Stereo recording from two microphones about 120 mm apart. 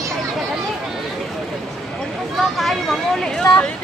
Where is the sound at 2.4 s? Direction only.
Centre (ahead or behind).